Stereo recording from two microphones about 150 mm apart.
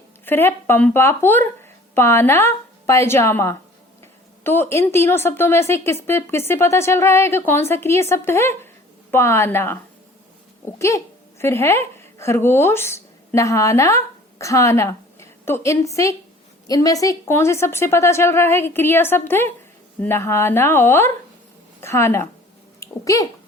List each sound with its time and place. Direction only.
0.3 s a woman's voice: 15° left (ahead or behind)